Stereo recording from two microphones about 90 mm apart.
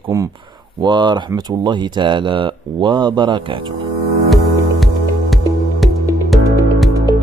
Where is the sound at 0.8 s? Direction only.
60° right (ahead or behind).